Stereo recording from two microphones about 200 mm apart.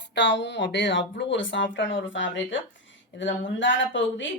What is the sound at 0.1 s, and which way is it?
Speech, 60° left (ahead or behind).